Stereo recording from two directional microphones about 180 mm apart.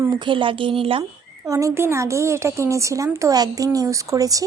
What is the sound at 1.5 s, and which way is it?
A woman's voice, 15° right (ahead or behind).